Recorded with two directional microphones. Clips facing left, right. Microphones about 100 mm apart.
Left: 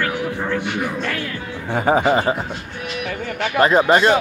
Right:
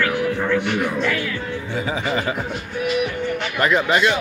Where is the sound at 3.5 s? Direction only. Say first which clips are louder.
Left 5 dB; 40° left (ahead or behind).